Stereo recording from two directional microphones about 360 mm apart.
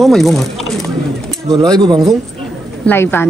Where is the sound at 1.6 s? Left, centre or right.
Centre.